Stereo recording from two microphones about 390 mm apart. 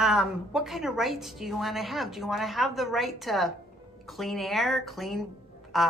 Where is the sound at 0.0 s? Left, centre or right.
Centre.